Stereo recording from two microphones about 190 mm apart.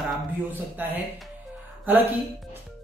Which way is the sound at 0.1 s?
10° right (ahead or behind).